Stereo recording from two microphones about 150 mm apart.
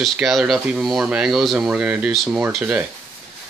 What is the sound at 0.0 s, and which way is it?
Speech, centre (ahead or behind).